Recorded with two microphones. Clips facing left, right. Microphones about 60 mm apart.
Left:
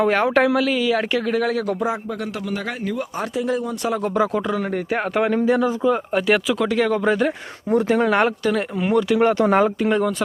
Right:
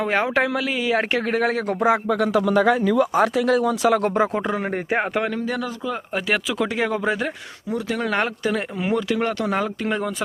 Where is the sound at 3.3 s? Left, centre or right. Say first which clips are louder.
Right 4 dB; right.